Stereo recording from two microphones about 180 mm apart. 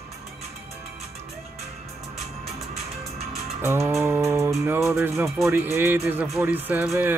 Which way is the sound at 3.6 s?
15° right (ahead or behind).